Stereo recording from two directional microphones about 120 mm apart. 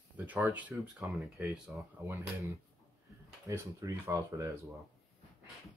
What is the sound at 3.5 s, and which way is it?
Speech, 25° right (ahead or behind).